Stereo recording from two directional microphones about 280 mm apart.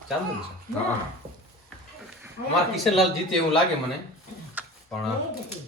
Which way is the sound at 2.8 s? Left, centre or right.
Centre.